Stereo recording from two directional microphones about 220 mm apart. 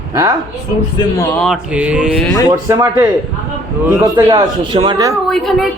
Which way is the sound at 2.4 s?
15° right (ahead or behind).